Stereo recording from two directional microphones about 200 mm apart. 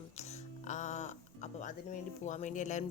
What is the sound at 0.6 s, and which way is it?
Music, 35° left (ahead or behind).